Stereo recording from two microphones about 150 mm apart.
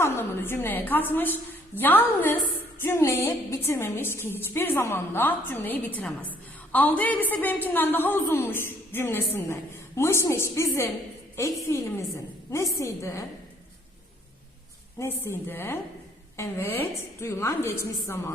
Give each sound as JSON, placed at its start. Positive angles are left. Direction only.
{"t": 0.0, "sound": "a woman's voice", "side_deg": 15}
{"t": 14.9, "sound": "a woman's voice", "side_deg": 15}